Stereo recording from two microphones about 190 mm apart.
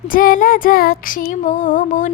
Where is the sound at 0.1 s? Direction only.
45° left (ahead or behind).